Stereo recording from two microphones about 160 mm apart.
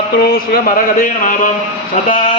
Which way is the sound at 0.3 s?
65° left (ahead or behind).